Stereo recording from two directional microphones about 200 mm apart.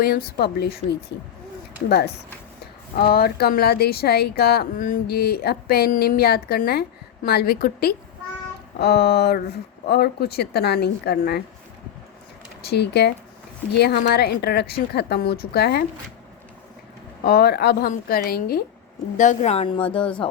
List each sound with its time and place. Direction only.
0.0 s speech: 50° left (ahead or behind)
3.0 s speech: 50° left (ahead or behind)
12.6 s speech: 55° left (ahead or behind)
17.2 s speech: 50° left (ahead or behind)
19.1 s a woman's voice: 40° left (ahead or behind)